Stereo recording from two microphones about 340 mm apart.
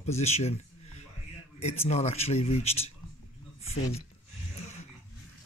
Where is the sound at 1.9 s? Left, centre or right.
Centre.